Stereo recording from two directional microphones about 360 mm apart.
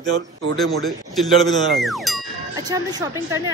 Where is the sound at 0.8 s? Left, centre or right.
Centre.